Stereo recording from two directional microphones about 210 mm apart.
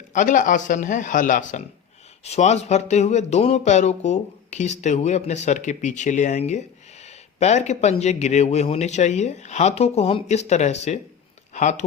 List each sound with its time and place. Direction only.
0.1 s speech: 40° left (ahead or behind)